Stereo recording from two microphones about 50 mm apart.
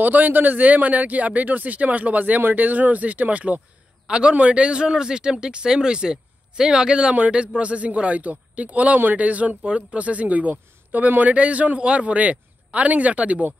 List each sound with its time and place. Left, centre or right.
0.0 s speech: right